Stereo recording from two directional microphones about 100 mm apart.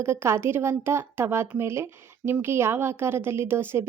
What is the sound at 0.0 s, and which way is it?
A woman's voice, 25° right (ahead or behind).